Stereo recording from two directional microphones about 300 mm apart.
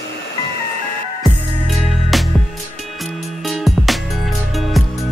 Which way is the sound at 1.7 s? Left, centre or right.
Centre.